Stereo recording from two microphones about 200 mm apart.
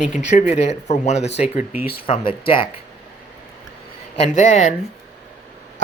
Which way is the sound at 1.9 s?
25° left (ahead or behind).